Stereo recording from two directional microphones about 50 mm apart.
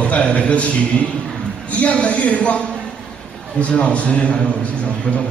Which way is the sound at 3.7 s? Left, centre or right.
Left.